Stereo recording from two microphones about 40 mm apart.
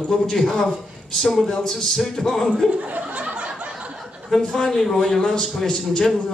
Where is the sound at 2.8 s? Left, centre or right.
Right.